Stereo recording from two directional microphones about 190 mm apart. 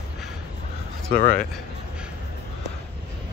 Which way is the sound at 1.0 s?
50° left (ahead or behind).